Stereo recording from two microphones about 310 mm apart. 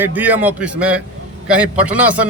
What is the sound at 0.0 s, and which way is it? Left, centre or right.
A man's voice, centre.